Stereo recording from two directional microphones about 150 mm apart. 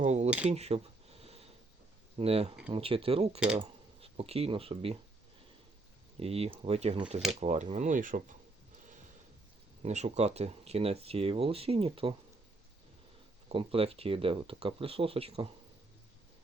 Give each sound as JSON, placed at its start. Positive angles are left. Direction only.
{"t": 0.0, "sound": "speech", "side_deg": -50}
{"t": 0.3, "sound": "speech", "side_deg": -10}
{"t": 0.5, "sound": "a sound", "side_deg": -45}
{"t": 2.1, "sound": "speech", "side_deg": -45}
{"t": 6.1, "sound": "speech", "side_deg": -40}
{"t": 9.8, "sound": "speech", "side_deg": -50}
{"t": 13.5, "sound": "speech", "side_deg": -40}